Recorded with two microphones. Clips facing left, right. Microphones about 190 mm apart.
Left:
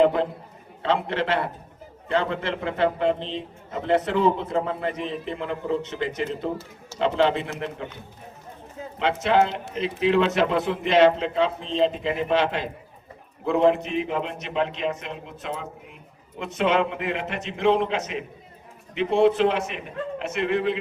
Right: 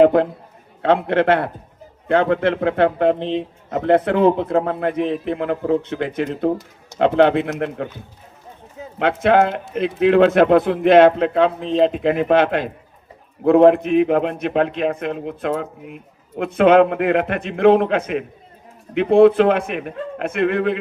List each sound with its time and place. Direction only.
0.0 s a man's voice: 55° right (ahead or behind)
9.0 s a man's voice: 55° right (ahead or behind)